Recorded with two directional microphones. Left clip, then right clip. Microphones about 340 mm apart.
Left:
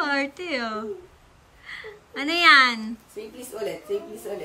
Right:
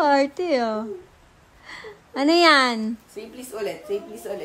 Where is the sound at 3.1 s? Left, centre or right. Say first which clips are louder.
Right 1 dB; centre.